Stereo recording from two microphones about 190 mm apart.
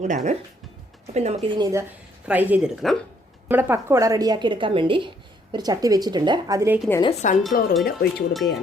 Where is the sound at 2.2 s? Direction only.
10° right (ahead or behind).